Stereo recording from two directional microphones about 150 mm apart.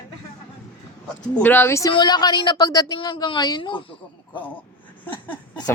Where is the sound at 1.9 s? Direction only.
30° left (ahead or behind).